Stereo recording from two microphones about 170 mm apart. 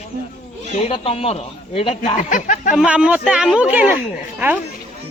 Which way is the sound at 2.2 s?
50° left (ahead or behind).